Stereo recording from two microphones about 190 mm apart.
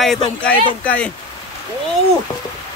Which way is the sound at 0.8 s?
5° left (ahead or behind).